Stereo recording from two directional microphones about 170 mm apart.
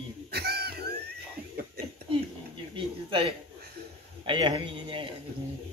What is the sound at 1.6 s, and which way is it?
Speech, 65° right (ahead or behind).